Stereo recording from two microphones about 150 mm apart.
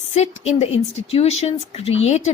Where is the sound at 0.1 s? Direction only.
45° left (ahead or behind).